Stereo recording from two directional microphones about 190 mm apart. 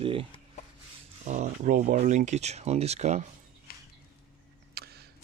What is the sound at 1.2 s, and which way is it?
Speech, 40° right (ahead or behind).